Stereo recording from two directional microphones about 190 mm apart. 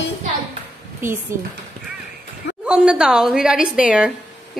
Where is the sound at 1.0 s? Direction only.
10° right (ahead or behind).